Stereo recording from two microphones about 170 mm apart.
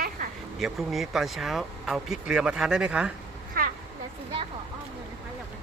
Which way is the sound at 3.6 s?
60° right (ahead or behind).